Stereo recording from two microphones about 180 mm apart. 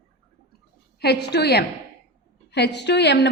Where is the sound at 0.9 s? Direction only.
65° left (ahead or behind).